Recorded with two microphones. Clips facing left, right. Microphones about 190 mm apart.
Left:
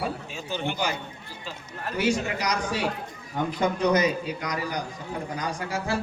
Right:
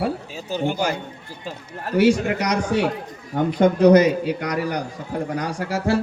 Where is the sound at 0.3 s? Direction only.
40° right (ahead or behind).